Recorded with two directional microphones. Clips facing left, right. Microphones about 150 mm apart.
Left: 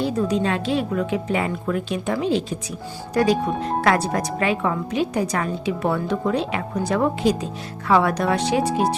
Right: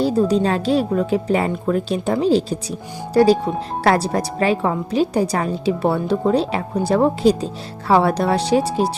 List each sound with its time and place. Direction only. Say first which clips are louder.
0.0 s a woman's voice: right 5 dB; 35° right (ahead or behind)